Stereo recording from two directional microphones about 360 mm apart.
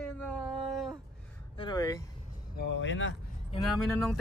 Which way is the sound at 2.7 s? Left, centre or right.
Left.